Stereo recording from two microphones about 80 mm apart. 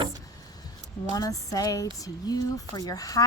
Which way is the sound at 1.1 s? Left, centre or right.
Left.